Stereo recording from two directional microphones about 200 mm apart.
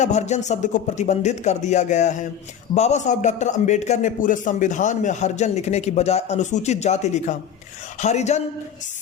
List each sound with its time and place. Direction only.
0.0 s a man's voice: 35° left (ahead or behind)